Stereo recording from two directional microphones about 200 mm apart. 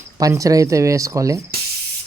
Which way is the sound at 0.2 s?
15° right (ahead or behind).